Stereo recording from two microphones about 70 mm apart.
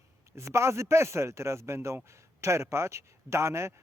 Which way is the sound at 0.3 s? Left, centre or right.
Right.